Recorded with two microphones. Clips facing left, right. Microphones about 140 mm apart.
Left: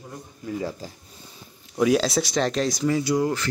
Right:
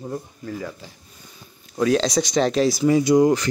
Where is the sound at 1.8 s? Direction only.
5° left (ahead or behind).